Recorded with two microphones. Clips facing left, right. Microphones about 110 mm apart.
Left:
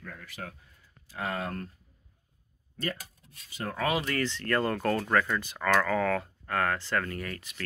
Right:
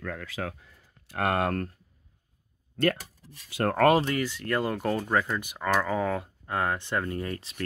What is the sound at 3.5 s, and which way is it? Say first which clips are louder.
Speech: right 9 dB; 60° right (ahead or behind).